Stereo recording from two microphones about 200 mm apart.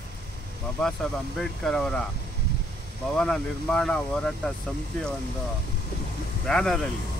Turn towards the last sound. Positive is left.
turn(degrees=5)  # may be behind; listen again after turning